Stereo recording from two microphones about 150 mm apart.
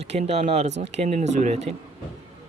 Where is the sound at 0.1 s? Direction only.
45° right (ahead or behind).